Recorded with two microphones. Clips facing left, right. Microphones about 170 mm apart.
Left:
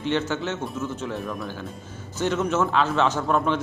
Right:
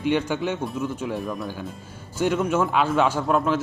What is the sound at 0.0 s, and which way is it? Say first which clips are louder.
A man's voice: right 2 dB; 10° right (ahead or behind).